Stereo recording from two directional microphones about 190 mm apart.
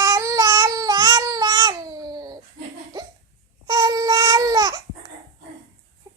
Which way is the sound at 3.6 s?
20° right (ahead or behind).